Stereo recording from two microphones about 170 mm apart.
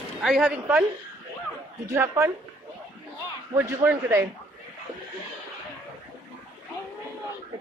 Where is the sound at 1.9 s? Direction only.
15° right (ahead or behind).